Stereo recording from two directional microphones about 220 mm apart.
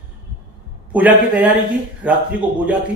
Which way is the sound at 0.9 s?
5° right (ahead or behind).